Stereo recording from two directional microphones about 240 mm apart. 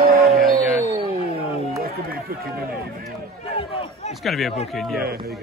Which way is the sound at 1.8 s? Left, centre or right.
Right.